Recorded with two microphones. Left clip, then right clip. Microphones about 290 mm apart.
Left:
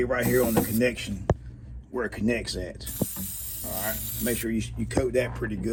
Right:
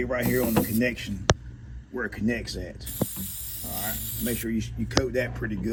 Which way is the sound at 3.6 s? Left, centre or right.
Left.